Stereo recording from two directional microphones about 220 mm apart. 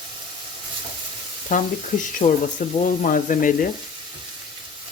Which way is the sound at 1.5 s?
35° left (ahead or behind).